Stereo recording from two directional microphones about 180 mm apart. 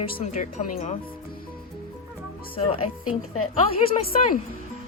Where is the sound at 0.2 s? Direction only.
35° left (ahead or behind).